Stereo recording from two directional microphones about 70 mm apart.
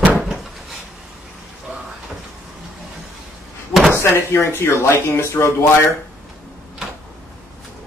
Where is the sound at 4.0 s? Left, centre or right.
Left.